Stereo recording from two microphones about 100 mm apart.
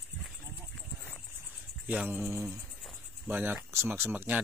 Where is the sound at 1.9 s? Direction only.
15° right (ahead or behind).